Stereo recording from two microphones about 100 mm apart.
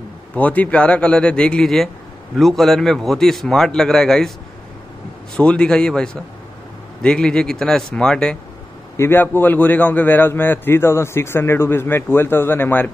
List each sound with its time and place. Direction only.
0.3 s a man's voice: 15° left (ahead or behind)
5.3 s a man's voice: 10° left (ahead or behind)
8.9 s a man's voice: 25° left (ahead or behind)